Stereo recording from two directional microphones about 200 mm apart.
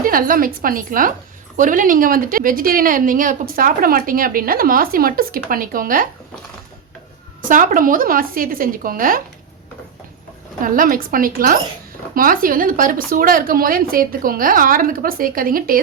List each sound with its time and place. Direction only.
0.0 s a woman's voice: 45° right (ahead or behind)
7.4 s a woman's voice: 40° right (ahead or behind)
10.6 s a woman's voice: 45° right (ahead or behind)